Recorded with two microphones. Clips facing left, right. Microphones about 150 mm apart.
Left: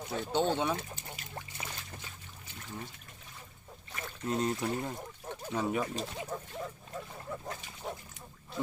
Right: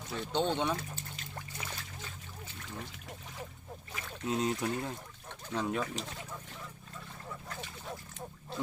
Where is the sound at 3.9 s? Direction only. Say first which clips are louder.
Even; centre (ahead or behind).